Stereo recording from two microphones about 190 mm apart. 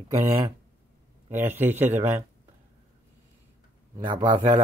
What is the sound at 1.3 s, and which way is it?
Speech, 10° right (ahead or behind).